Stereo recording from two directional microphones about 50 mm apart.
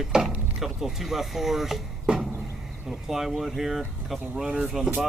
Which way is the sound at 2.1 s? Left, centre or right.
Centre.